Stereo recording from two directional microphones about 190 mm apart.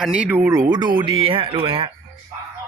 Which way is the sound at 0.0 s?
5° right (ahead or behind).